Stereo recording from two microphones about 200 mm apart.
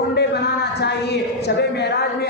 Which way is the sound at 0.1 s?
55° left (ahead or behind).